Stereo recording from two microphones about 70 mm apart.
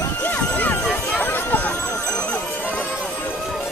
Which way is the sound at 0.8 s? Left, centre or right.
Centre.